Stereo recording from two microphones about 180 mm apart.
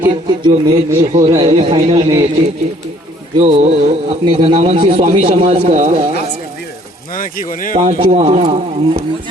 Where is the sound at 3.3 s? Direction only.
40° right (ahead or behind).